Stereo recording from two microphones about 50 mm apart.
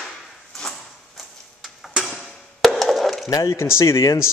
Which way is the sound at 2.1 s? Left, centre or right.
Centre.